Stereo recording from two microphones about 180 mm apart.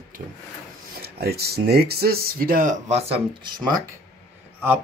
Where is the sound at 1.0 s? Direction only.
60° right (ahead or behind); by 3.0 s 45° right (ahead or behind).